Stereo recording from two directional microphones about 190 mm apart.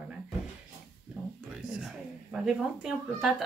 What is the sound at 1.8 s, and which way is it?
Speech, centre (ahead or behind).